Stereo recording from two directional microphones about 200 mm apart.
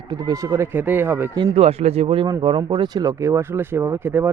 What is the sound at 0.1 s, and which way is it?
Speech, 20° right (ahead or behind).